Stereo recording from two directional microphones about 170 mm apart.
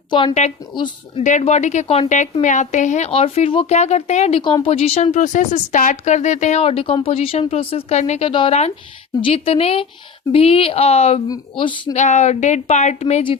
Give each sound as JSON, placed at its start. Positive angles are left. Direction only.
{"t": 0.1, "sound": "speech", "side_deg": 25}
{"t": 1.2, "sound": "a woman's voice", "side_deg": 45}
{"t": 3.1, "sound": "speech", "side_deg": 35}
{"t": 8.3, "sound": "speech", "side_deg": 30}
{"t": 11.3, "sound": "speech", "side_deg": 25}
{"t": 11.9, "sound": "speech", "side_deg": 45}